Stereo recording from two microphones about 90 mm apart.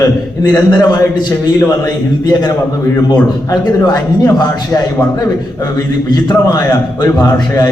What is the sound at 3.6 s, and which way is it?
A man's voice, 55° left (ahead or behind).